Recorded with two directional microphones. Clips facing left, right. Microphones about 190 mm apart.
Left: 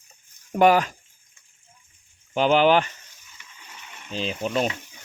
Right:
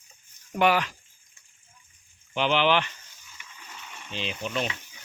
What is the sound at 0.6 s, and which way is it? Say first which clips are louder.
Speech: left 6 dB; 45° left (ahead or behind).